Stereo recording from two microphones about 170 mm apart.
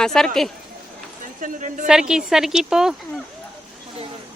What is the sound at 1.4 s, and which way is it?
Speech, 50° right (ahead or behind).